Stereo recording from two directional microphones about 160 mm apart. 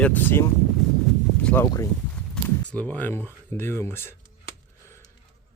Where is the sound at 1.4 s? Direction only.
10° left (ahead or behind).